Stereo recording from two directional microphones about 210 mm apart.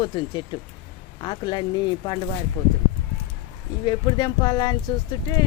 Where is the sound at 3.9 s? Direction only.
20° left (ahead or behind).